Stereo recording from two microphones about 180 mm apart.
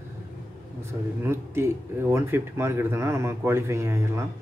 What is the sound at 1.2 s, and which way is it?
A man's voice, 15° right (ahead or behind).